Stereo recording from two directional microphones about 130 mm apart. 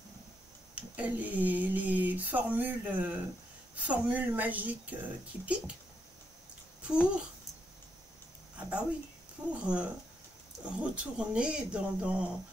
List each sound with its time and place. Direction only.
0.7 s speech: 10° right (ahead or behind)
6.9 s speech: 10° right (ahead or behind)
8.5 s a woman's voice: 10° right (ahead or behind)